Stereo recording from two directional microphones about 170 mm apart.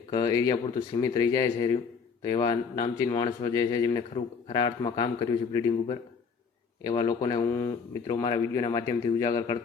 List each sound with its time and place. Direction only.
0.1 s speech: 25° left (ahead or behind)